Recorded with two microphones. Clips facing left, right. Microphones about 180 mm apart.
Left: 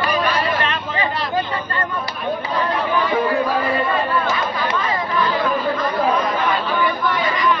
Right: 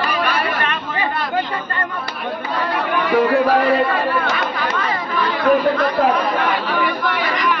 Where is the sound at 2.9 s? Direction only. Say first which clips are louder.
Right 5 dB; 70° right (ahead or behind).